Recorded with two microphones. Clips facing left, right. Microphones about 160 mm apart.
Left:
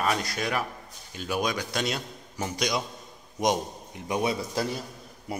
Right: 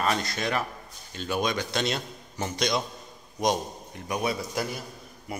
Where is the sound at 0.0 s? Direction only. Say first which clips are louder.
Even; 10° left (ahead or behind).